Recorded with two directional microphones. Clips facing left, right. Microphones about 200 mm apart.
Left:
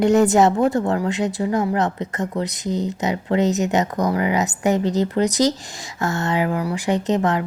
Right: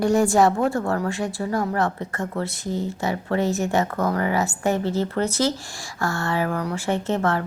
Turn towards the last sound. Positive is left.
turn(degrees=15)  # may be behind; listen again after turning